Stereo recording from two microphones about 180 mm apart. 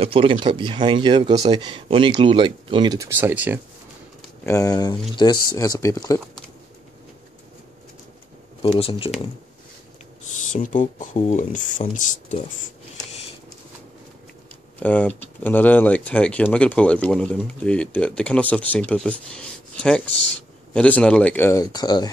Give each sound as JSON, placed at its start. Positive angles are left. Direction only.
{"t": 0.0, "sound": "speech", "side_deg": -30}
{"t": 4.5, "sound": "speech", "side_deg": 20}
{"t": 8.6, "sound": "speech", "side_deg": 30}
{"t": 10.2, "sound": "speech", "side_deg": 45}
{"t": 14.8, "sound": "speech", "side_deg": 10}